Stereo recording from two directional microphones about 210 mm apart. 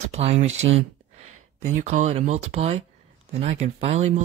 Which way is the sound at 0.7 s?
30° right (ahead or behind).